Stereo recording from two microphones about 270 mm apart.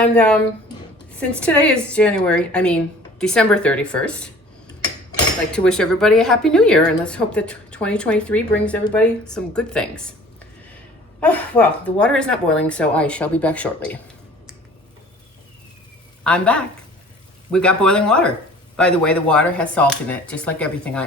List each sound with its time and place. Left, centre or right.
0.0 s a woman's voice: centre
5.5 s a woman's voice: centre
11.2 s a woman's voice: centre
16.2 s a woman's voice: centre